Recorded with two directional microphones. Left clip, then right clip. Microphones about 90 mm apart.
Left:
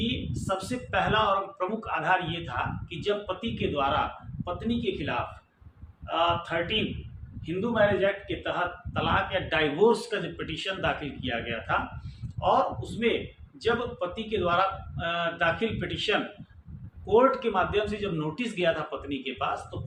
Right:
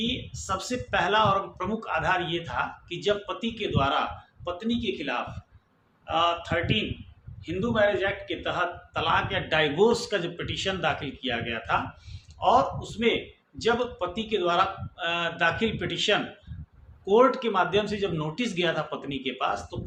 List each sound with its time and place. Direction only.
0.4 s speech: 40° right (ahead or behind)
0.9 s a man's voice: 50° right (ahead or behind)
4.5 s a man's voice: 30° right (ahead or behind); by 19.5 s 50° right (ahead or behind)